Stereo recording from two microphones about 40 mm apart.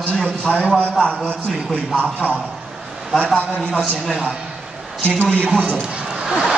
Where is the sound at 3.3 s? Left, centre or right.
Left.